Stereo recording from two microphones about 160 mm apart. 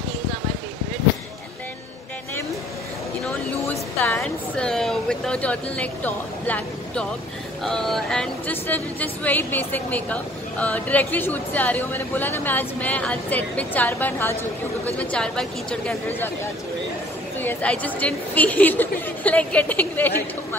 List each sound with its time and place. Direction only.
4.0 s speech: 10° left (ahead or behind)
17.4 s speech: 10° left (ahead or behind)